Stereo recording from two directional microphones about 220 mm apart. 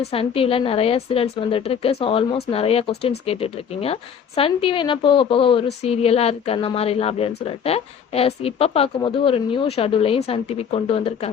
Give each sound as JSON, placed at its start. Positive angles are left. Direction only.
{"t": 0.0, "sound": "a woman's voice", "side_deg": 25}